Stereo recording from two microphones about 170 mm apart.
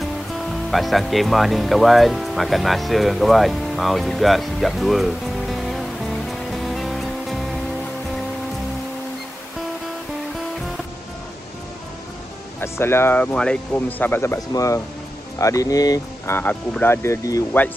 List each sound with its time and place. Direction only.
0.3 s speech: centre (ahead or behind)
12.5 s speech: 15° left (ahead or behind)